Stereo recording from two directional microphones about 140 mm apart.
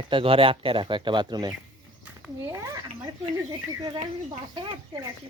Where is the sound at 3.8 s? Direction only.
35° right (ahead or behind).